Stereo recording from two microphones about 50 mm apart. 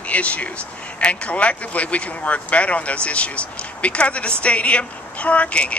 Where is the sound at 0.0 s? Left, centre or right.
Left.